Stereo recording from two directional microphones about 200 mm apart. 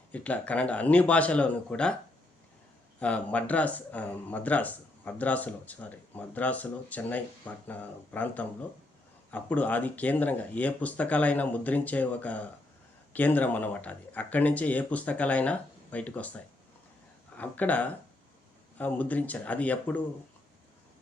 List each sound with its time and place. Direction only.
0.1 s speech: 5° left (ahead or behind)
3.0 s speech: 5° left (ahead or behind)